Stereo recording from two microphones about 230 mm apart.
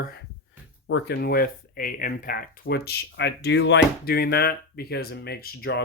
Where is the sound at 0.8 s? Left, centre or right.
Left.